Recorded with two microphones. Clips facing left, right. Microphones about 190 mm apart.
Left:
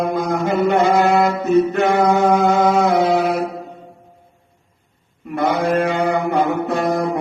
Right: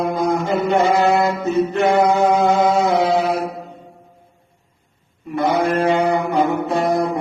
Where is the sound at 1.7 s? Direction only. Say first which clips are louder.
Even; 60° left (ahead or behind).